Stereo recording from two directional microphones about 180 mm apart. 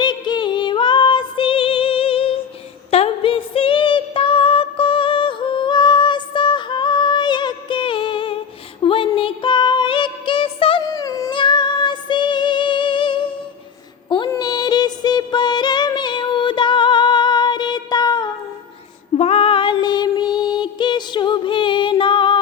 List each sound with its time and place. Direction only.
0.0 s music: 25° left (ahead or behind)
2.9 s female singing: 30° left (ahead or behind)
8.8 s music: 30° left (ahead or behind)
19.1 s child singing: 35° left (ahead or behind)